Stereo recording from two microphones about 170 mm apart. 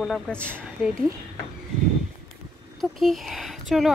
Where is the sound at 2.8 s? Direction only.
Centre (ahead or behind).